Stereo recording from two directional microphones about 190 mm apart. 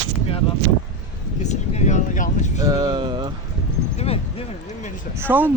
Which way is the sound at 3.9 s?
30° left (ahead or behind).